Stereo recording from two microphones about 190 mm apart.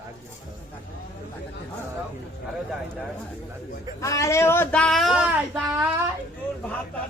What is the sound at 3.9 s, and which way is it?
Speech, 15° left (ahead or behind).